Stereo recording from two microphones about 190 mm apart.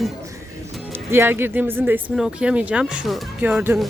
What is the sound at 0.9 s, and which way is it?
Speech, 10° right (ahead or behind).